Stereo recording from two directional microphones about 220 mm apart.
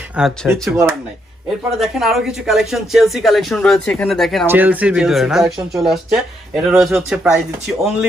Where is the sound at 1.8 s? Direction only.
Centre (ahead or behind).